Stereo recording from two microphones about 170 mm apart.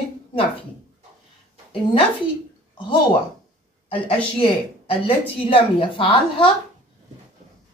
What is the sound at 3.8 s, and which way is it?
Speech, 35° left (ahead or behind).